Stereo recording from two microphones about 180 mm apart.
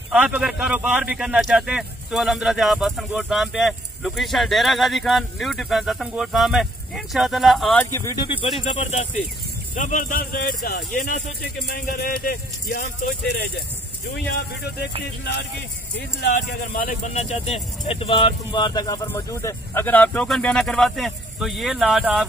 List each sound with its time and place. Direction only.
0.1 s speech: 10° right (ahead or behind)
7.8 s speech: 15° left (ahead or behind)
8.5 s speech: 40° left (ahead or behind); by 10.9 s 60° left (ahead or behind)
11.0 s speech: 45° left (ahead or behind)
14.2 s speech: 65° left (ahead or behind)
16.0 s speech: 65° left (ahead or behind); by 22.2 s centre (ahead or behind)